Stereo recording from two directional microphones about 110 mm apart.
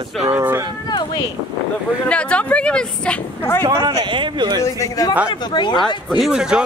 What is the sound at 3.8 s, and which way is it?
Speech, 45° right (ahead or behind).